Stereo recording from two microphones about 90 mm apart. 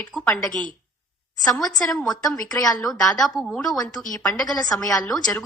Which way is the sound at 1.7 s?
45° left (ahead or behind).